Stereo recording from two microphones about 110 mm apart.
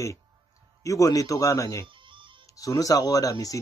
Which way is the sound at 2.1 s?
50° right (ahead or behind).